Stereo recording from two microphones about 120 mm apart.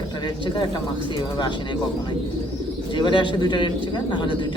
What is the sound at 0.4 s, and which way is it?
Speech, 40° left (ahead or behind).